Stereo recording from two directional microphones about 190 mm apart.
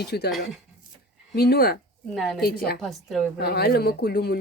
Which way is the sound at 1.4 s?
55° left (ahead or behind).